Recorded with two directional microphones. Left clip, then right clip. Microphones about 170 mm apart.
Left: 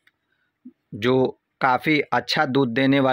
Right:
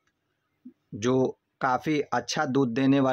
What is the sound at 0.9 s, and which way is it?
Speech, 20° left (ahead or behind).